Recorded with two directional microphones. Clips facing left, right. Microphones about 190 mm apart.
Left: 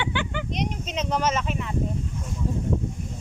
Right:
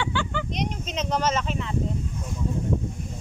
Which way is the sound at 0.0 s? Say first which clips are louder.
Even; 15° left (ahead or behind).